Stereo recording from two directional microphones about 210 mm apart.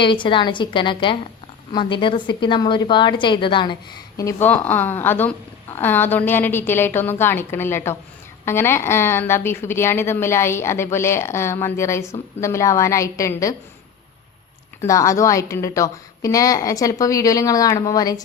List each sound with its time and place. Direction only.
0.0 s a woman's voice: 25° left (ahead or behind)
14.8 s a woman's voice: 15° left (ahead or behind)